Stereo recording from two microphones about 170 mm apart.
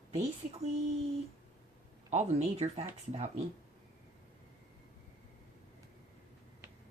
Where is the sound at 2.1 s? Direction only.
40° right (ahead or behind).